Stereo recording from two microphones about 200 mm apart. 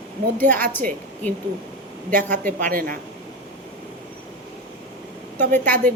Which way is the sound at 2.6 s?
45° right (ahead or behind).